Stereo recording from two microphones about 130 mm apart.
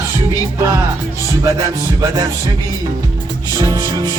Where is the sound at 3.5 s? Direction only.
25° right (ahead or behind).